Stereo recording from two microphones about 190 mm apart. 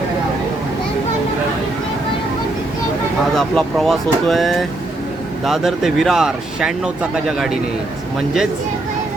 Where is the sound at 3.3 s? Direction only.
Centre (ahead or behind).